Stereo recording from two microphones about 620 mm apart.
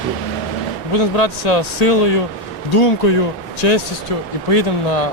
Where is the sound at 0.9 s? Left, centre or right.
Left.